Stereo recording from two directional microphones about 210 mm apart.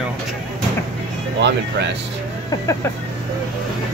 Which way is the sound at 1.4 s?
55° right (ahead or behind).